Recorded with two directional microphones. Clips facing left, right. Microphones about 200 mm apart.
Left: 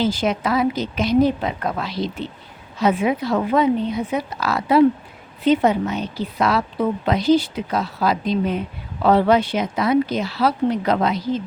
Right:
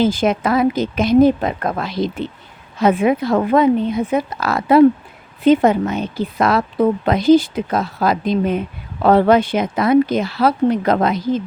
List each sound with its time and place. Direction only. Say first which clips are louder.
0.0 s a woman's voice: right 4 dB; 50° right (ahead or behind)